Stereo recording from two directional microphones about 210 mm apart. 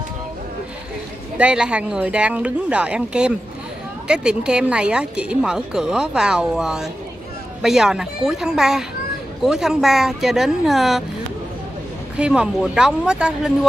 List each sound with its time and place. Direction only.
1.4 s speech: 5° right (ahead or behind)
12.2 s speech: 5° right (ahead or behind)